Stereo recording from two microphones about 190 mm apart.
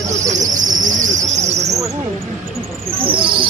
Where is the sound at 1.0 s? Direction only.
40° right (ahead or behind).